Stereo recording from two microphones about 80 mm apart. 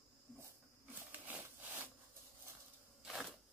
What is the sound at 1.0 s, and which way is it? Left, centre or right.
Sawing, centre.